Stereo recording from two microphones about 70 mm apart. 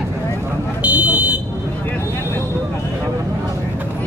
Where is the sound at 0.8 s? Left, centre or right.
Right.